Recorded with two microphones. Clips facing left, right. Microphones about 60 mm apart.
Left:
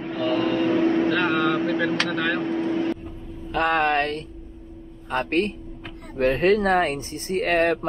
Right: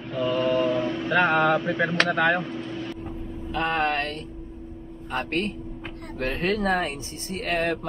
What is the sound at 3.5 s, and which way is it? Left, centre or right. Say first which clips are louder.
Speech: left 4 dB; left.